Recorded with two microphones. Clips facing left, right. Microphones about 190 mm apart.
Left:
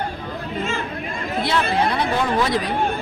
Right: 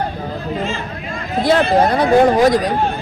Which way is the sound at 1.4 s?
50° right (ahead or behind).